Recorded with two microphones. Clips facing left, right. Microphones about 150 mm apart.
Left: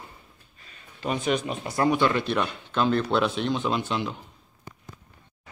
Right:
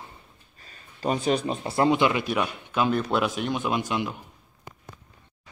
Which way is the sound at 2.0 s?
10° right (ahead or behind).